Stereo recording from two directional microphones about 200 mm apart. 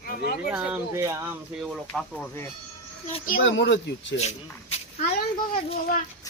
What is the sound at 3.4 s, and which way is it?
Speech, 65° left (ahead or behind).